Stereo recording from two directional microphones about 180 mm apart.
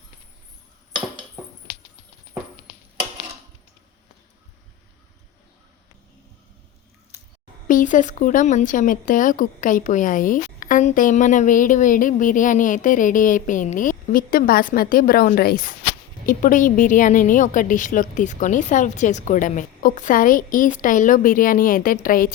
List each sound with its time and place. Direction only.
7.7 s a woman's voice: 45° left (ahead or behind)